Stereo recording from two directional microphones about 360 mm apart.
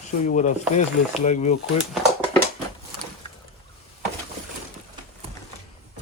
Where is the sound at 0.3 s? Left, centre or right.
Left.